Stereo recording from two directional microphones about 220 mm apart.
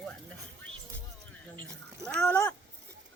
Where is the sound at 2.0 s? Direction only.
5° left (ahead or behind).